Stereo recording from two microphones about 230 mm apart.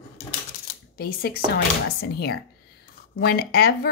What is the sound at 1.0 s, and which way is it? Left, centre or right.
Speech, left.